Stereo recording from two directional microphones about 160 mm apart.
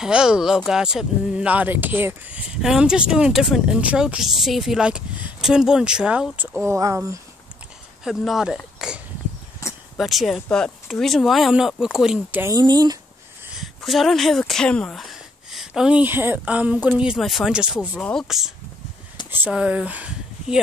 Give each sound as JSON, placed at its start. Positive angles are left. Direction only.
{"t": 0.0, "sound": "speech", "side_deg": -5}
{"t": 8.0, "sound": "speech", "side_deg": 0}
{"t": 9.6, "sound": "a sound", "side_deg": 20}
{"t": 9.9, "sound": "speech", "side_deg": 0}
{"t": 12.5, "sound": "speech", "side_deg": -25}
{"t": 13.6, "sound": "speech", "side_deg": 0}
{"t": 17.9, "sound": "speech", "side_deg": 5}